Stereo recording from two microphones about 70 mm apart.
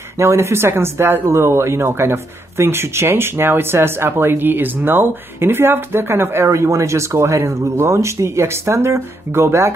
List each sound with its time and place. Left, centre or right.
0.2 s speech: right